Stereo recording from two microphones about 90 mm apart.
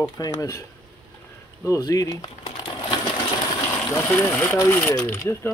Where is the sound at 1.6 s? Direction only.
40° left (ahead or behind).